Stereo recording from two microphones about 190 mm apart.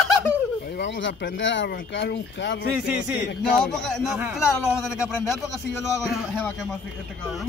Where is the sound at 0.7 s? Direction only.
65° left (ahead or behind).